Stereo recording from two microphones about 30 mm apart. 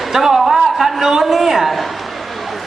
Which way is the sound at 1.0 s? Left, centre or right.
Centre.